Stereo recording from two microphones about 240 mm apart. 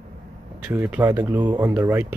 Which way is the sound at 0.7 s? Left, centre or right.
Centre.